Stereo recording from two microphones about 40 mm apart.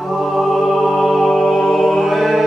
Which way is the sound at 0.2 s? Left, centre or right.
Centre.